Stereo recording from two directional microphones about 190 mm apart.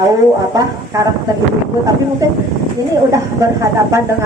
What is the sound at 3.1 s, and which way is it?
Speech, 15° right (ahead or behind).